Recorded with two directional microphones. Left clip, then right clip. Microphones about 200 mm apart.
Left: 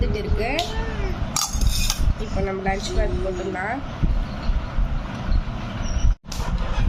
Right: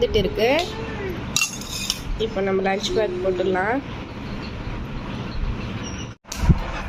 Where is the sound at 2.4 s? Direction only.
10° right (ahead or behind).